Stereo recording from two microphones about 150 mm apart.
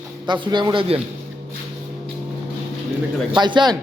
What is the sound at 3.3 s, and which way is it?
Speech, 30° right (ahead or behind).